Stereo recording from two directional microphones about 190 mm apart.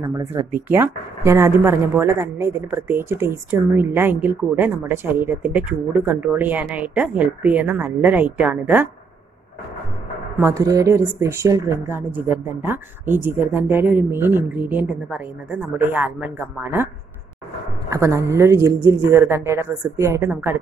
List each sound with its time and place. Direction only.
0.0 s speech: 15° right (ahead or behind)
10.3 s speech: 15° right (ahead or behind)
17.8 s speech: 15° right (ahead or behind)